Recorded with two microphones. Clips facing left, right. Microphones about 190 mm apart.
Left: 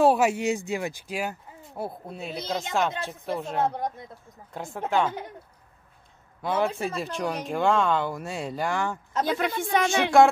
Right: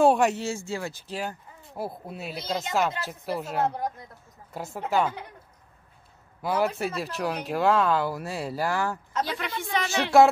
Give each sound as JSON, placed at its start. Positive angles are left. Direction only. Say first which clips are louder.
{"t": 0.0, "sound": "speech", "louder": "even", "side_deg": 5}
{"t": 1.8, "sound": "speech", "louder": "even", "side_deg": -5}
{"t": 6.4, "sound": "speech", "louder": "even", "side_deg": -5}
{"t": 9.1, "sound": "a woman's voice", "louder": "left 4 dB", "side_deg": 45}
{"t": 10.1, "sound": "speech", "louder": "even", "side_deg": 0}